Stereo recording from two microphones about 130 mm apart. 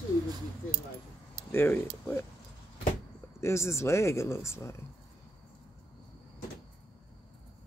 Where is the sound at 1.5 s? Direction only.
20° left (ahead or behind).